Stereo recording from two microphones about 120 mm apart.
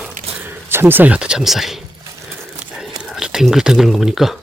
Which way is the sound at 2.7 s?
5° right (ahead or behind).